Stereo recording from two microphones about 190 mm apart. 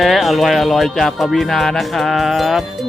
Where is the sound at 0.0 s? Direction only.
Centre (ahead or behind).